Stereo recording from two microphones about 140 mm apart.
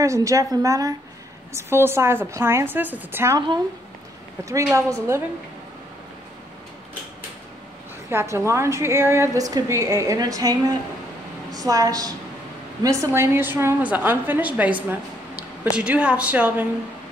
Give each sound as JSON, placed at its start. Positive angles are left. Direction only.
{"t": 0.0, "sound": "a woman's voice", "side_deg": -20}
{"t": 4.7, "sound": "a woman's voice", "side_deg": -20}
{"t": 8.1, "sound": "a woman's voice", "side_deg": -15}